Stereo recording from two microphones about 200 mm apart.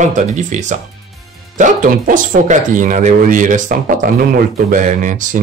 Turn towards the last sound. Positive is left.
turn(degrees=-40)  # may be behind; listen again after turning